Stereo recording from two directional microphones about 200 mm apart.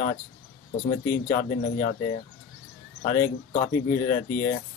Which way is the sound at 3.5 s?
35° left (ahead or behind).